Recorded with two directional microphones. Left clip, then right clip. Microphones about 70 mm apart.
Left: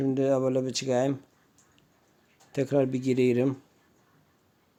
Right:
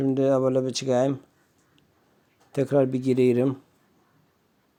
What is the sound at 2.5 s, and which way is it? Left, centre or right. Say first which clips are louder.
Speech: right 4 dB; right.